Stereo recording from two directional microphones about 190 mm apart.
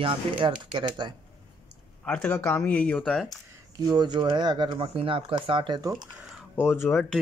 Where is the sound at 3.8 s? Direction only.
20° right (ahead or behind).